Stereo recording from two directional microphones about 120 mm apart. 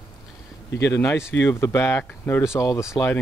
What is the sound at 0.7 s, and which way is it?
Speech, 25° left (ahead or behind).